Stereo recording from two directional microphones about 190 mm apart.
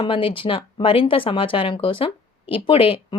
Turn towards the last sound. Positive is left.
turn(degrees=30)  # may be behind; listen again after turning